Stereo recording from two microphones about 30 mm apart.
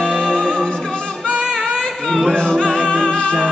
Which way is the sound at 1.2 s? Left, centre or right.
Left.